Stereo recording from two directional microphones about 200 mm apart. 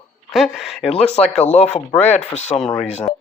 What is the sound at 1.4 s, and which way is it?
Speech, 35° left (ahead or behind).